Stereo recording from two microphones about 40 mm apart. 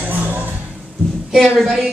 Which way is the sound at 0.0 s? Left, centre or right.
Right.